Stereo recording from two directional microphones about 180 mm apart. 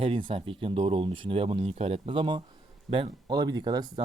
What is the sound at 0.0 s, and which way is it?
Speech, 30° right (ahead or behind).